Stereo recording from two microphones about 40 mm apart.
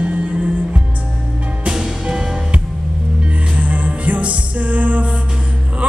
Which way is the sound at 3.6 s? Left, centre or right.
Right.